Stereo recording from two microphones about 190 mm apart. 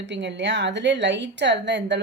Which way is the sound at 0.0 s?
70° right (ahead or behind).